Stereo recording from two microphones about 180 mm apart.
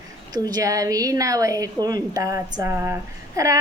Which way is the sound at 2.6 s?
15° right (ahead or behind).